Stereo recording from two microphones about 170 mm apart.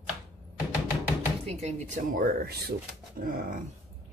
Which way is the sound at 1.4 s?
40° right (ahead or behind).